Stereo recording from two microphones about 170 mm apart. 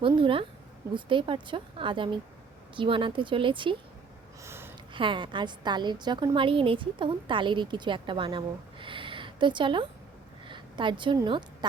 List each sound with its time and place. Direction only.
0.2 s a woman's voice: 30° right (ahead or behind)
4.4 s a sound: 15° right (ahead or behind)
4.9 s a woman's voice: 30° right (ahead or behind)